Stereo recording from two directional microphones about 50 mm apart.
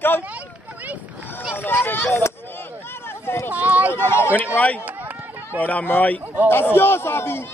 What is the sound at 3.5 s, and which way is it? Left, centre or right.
Speech, right.